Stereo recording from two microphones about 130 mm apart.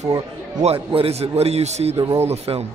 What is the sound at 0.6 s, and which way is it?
A man's voice, 50° right (ahead or behind).